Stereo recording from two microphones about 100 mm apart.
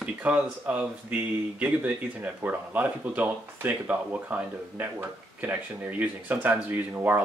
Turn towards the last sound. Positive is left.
turn(degrees=-20)  # may be behind; listen again after turning